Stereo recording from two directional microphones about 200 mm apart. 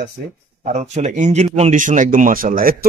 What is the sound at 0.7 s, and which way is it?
Speech, 35° right (ahead or behind).